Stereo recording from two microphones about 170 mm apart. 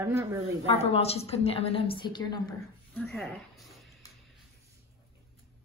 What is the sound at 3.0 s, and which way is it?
Speech, 5° left (ahead or behind).